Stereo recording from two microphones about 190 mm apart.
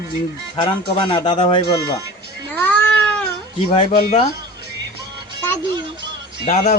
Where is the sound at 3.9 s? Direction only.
50° left (ahead or behind).